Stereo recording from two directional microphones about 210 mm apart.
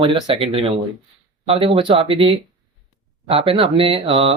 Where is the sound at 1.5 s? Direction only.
25° right (ahead or behind).